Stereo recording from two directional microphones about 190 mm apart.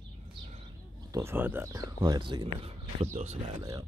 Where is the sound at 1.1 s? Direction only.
15° right (ahead or behind).